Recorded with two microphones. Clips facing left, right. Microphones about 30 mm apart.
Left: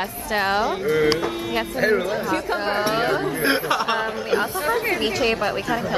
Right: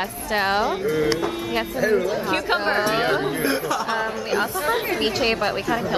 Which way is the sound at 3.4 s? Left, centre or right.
Left.